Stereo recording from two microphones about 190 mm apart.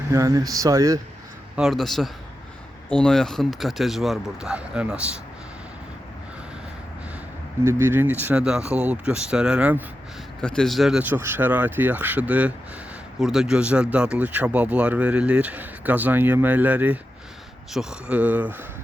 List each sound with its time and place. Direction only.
0.1 s speech: 15° right (ahead or behind)
1.5 s speech: centre (ahead or behind)
7.6 s speech: 15° right (ahead or behind)
10.4 s speech: 5° left (ahead or behind)